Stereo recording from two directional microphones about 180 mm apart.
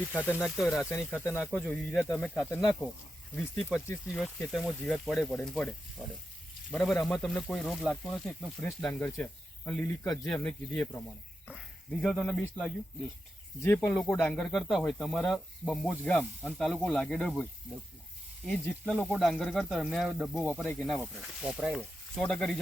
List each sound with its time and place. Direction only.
0.3 s speech: centre (ahead or behind)
0.8 s speech: 10° left (ahead or behind)
6.0 s frying: 10° right (ahead or behind)
6.7 s speech: 5° left (ahead or behind)
8.6 s speech: 10° left (ahead or behind)
18.4 s speech: 5° left (ahead or behind)
20.5 s speech: 10° left (ahead or behind)
20.7 s speech: centre (ahead or behind)